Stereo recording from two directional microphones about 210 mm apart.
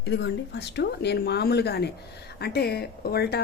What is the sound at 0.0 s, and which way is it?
Speech, 55° left (ahead or behind).